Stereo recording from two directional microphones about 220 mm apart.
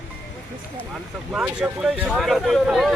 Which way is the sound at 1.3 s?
5° right (ahead or behind).